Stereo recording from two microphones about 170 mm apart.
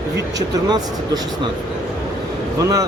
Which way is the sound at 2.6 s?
20° right (ahead or behind).